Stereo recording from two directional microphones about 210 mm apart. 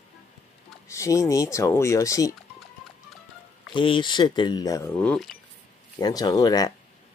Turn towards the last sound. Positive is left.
turn(degrees=20)  # may be behind; listen again after turning